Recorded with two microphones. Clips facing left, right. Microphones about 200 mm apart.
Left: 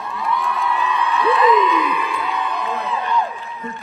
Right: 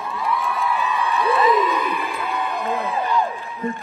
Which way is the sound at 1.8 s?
50° right (ahead or behind).